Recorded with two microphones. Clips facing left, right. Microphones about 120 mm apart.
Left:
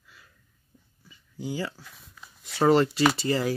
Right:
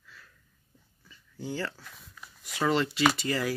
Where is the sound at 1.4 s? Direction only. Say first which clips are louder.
Left 2 dB; 10° left (ahead or behind).